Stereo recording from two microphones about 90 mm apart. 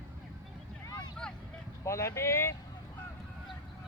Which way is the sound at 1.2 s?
10° left (ahead or behind).